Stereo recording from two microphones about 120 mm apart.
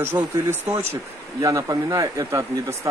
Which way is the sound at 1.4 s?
30° right (ahead or behind).